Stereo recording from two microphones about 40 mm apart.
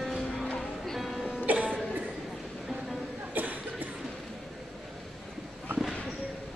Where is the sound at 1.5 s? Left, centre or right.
Right.